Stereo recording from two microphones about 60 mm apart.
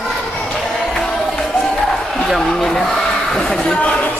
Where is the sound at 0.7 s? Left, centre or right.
Centre.